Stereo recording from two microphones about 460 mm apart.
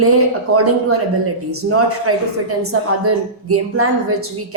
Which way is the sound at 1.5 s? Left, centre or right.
Right.